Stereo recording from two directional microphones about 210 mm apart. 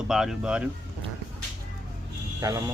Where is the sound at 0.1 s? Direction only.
Centre (ahead or behind).